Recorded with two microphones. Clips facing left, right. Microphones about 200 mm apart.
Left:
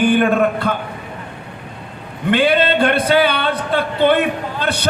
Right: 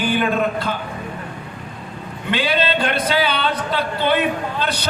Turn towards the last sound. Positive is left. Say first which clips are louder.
# left 2 dB
turn(degrees=55)  # may be behind; listen again after turning